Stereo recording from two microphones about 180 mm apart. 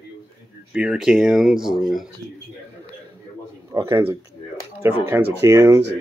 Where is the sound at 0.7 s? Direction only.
5° right (ahead or behind).